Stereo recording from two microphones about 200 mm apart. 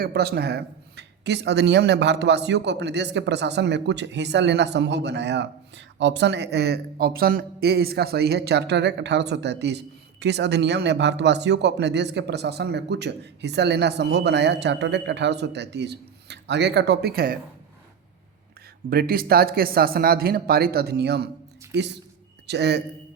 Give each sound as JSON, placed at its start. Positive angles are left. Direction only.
{"t": 0.0, "sound": "speech", "side_deg": -55}
{"t": 18.9, "sound": "speech", "side_deg": -50}